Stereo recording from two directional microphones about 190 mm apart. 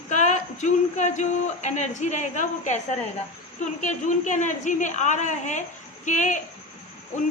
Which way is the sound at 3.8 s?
40° left (ahead or behind).